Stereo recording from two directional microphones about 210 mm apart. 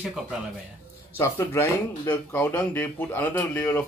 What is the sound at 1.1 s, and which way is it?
A man's voice, 10° left (ahead or behind).